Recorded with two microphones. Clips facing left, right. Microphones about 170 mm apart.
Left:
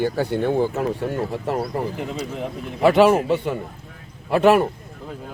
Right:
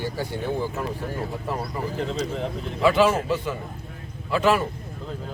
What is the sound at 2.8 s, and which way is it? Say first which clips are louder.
A man's voice: left 5 dB; 60° left (ahead or behind).